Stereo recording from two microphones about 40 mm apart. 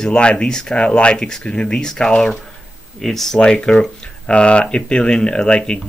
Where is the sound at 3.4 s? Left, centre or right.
Left.